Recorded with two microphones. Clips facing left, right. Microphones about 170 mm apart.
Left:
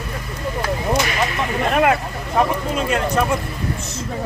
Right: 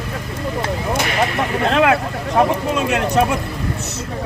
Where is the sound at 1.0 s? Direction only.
60° right (ahead or behind); by 1.9 s 85° right.